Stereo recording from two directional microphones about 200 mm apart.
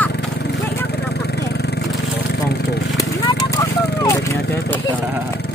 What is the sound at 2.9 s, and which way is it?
Horse, 15° left (ahead or behind).